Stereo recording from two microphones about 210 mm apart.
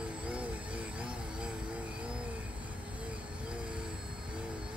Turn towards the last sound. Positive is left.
turn(degrees=-5)  # may be behind; listen again after turning